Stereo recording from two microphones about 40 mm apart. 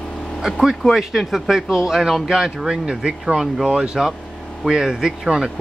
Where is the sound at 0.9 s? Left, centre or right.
Centre.